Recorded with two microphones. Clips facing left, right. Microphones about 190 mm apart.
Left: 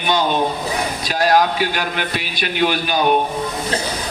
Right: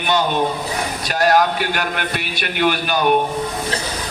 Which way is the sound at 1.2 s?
55° right (ahead or behind).